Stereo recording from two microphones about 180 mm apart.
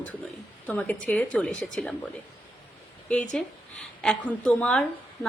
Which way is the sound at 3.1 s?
5° left (ahead or behind).